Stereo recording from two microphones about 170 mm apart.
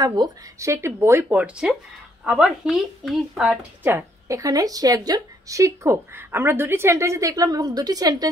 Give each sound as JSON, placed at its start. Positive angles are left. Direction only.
{"t": 0.0, "sound": "speech", "side_deg": -25}
{"t": 3.8, "sound": "a woman's voice", "side_deg": -15}